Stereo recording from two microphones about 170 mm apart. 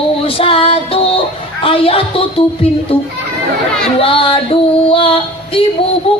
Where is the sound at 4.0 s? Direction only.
35° left (ahead or behind).